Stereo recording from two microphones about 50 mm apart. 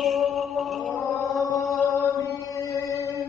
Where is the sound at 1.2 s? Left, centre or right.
Left.